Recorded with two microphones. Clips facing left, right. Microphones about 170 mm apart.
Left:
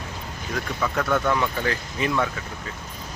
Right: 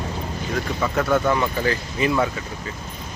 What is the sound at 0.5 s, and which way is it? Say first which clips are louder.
A man's voice: right 3 dB; 5° right (ahead or behind).